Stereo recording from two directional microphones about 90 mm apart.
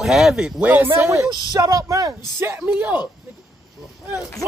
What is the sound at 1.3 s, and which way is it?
Speech, 45° right (ahead or behind).